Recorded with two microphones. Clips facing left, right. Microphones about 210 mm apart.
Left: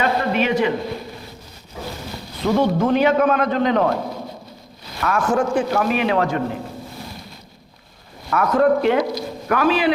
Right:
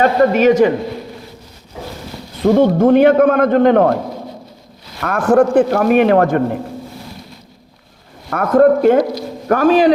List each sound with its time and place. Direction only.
0.0 s a man's voice: 45° right (ahead or behind)
2.4 s a man's voice: 50° right (ahead or behind)
4.9 s a man's voice: 55° right (ahead or behind)
8.3 s a man's voice: 50° right (ahead or behind)